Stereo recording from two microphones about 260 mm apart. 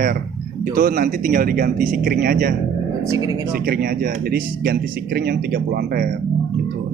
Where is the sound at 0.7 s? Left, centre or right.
Right.